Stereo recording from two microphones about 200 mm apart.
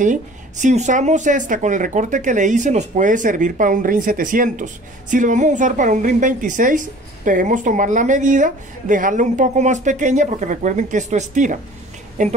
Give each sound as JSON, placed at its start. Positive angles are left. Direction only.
{"t": 0.0, "sound": "a woman's voice", "side_deg": -40}